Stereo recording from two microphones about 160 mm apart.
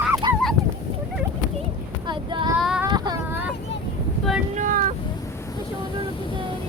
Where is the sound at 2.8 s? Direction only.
25° right (ahead or behind).